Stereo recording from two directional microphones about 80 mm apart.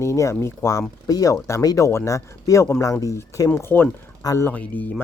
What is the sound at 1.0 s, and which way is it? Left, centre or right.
Speech, left.